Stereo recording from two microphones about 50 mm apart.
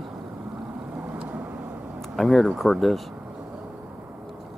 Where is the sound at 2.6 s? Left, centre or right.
Centre.